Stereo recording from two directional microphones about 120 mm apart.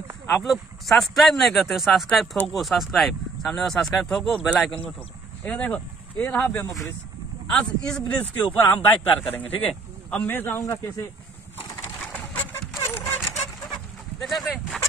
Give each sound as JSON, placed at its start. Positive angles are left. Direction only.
{"t": 0.3, "sound": "a man's voice", "side_deg": 0}
{"t": 12.1, "sound": "a sound", "side_deg": 15}
{"t": 14.2, "sound": "speech", "side_deg": 0}